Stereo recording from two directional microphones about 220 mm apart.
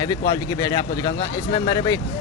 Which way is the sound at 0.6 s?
15° left (ahead or behind).